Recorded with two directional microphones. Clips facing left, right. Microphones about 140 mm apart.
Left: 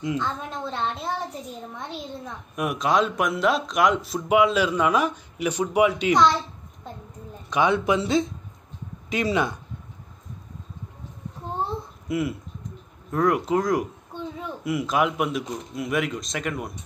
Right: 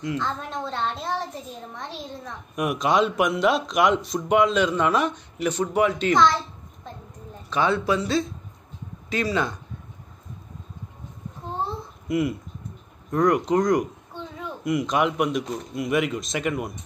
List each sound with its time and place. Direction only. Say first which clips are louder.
0.2 s a woman's voice: even; 5° left (ahead or behind)
7.4 s speech: left 1 dB; 15° left (ahead or behind)
12.1 s a woman's voice: right 2 dB; centre (ahead or behind)